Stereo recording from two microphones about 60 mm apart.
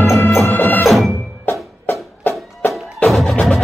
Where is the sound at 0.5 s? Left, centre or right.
Left.